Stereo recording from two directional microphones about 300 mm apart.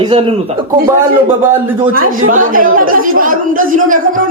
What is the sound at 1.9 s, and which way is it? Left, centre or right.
A man's voice, right.